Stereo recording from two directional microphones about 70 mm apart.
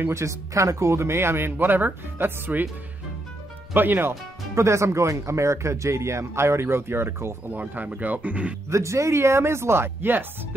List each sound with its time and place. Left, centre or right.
0.0 s speech: right
3.7 s speech: right
4.6 s speech: right
8.6 s speech: right